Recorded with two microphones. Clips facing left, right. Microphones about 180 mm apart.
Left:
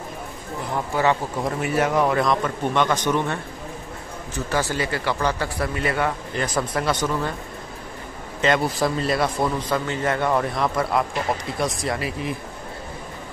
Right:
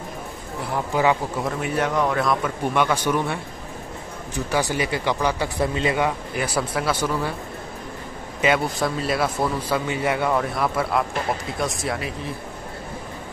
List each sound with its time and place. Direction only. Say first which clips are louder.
0.9 s speech: right 1 dB; 15° right (ahead or behind)
1.4 s speech: left 2 dB; 5° left (ahead or behind)
4.5 s speech: right 1 dB; 15° right (ahead or behind)
8.5 s speech: left 2 dB; centre (ahead or behind)